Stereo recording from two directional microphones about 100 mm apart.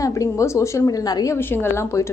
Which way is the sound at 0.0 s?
30° left (ahead or behind).